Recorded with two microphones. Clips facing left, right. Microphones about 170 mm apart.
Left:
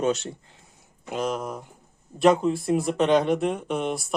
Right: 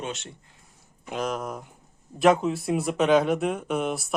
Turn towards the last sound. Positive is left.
turn(degrees=0)  # may be behind; listen again after turning